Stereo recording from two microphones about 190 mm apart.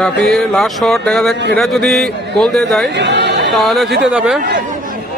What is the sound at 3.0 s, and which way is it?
Chatter, 65° right (ahead or behind).